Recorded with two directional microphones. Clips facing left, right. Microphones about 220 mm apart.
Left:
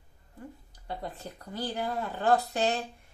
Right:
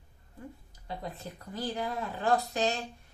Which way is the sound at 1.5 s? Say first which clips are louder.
Left 1 dB; 30° left (ahead or behind).